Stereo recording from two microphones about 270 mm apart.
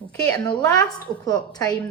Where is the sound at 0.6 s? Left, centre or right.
Centre.